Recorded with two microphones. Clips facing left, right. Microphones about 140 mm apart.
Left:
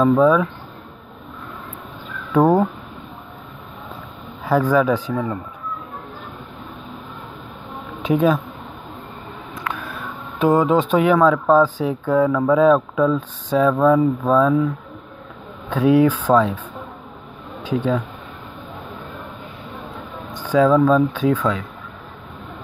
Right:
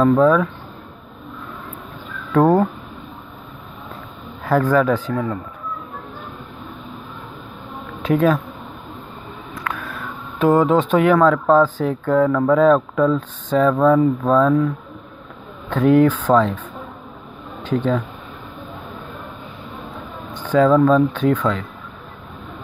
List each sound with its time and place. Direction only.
0.0 s speech: 5° left (ahead or behind)
2.3 s speech: 5° left (ahead or behind)
4.5 s speech: 5° left (ahead or behind)
8.0 s speech: 15° left (ahead or behind)
9.6 s a sound: 25° left (ahead or behind)
10.4 s speech: 15° left (ahead or behind)
15.7 s speech: 10° left (ahead or behind)
17.6 s speech: 10° left (ahead or behind)
20.4 s speech: 5° left (ahead or behind)